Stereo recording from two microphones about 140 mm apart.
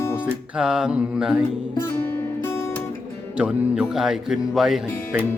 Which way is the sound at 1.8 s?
15° left (ahead or behind).